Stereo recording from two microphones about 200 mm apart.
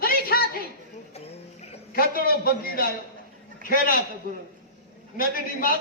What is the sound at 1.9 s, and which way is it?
A man's voice, 45° left (ahead or behind).